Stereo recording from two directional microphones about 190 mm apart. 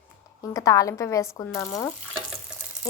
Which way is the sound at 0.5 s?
20° left (ahead or behind).